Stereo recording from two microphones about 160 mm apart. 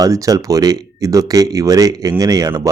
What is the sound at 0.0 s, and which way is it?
Speech, 20° right (ahead or behind).